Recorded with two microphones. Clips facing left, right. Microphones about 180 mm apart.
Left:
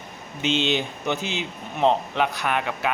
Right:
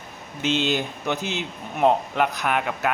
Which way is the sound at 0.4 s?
5° right (ahead or behind).